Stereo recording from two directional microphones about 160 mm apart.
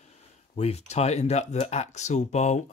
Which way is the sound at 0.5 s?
40° left (ahead or behind).